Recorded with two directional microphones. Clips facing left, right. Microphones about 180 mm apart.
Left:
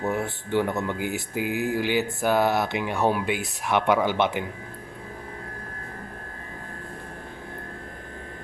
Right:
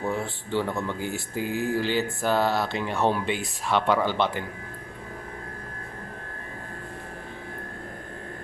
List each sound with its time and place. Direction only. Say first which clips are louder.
0.0 s speech: left 2 dB; 20° left (ahead or behind)